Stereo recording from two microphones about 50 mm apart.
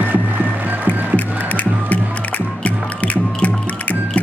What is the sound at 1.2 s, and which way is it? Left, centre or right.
Music, left.